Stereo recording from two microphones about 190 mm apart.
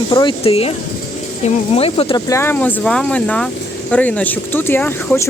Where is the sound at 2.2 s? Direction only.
15° left (ahead or behind).